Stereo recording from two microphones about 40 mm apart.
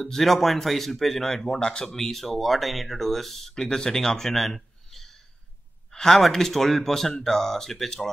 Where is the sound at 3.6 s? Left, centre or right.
Centre.